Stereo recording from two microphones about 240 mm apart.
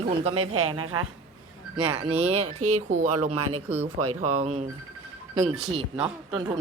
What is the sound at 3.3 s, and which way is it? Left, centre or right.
Speech, right.